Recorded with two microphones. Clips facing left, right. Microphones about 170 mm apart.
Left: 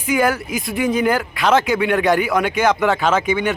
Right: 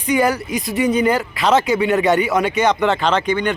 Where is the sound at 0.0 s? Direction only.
Centre (ahead or behind).